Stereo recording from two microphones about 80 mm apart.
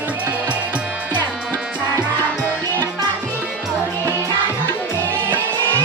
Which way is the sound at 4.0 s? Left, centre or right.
Right.